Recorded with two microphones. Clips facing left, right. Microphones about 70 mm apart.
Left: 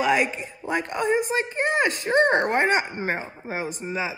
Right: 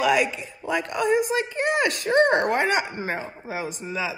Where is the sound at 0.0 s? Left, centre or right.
Left.